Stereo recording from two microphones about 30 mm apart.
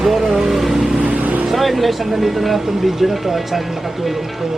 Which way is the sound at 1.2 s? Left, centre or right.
Right.